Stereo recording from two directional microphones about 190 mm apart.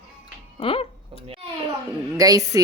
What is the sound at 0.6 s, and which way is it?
Speech, 30° left (ahead or behind).